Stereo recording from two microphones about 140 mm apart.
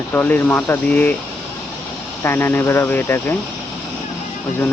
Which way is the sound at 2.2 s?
15° left (ahead or behind).